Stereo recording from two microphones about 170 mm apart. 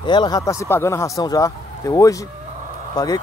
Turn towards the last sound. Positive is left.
turn(degrees=20)  # may be behind; listen again after turning